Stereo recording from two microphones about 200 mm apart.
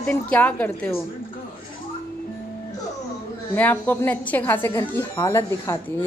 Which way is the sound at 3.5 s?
10° left (ahead or behind).